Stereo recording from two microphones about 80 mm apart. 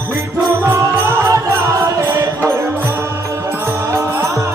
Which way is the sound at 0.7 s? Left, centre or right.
Right.